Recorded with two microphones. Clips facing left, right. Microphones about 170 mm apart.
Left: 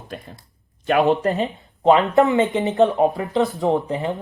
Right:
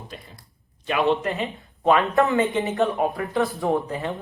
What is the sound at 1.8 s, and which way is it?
Speech, 20° left (ahead or behind).